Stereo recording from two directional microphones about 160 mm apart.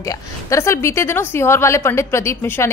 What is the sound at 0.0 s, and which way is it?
A woman's voice, 20° left (ahead or behind).